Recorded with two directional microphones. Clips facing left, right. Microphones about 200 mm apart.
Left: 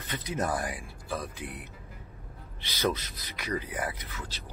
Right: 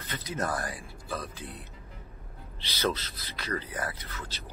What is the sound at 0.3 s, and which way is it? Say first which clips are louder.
Speech: left 1 dB; 15° left (ahead or behind).